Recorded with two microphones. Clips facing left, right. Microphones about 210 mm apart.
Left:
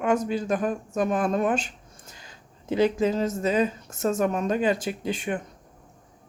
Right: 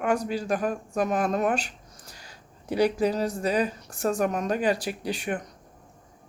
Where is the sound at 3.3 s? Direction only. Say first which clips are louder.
Left 2 dB; 25° left (ahead or behind).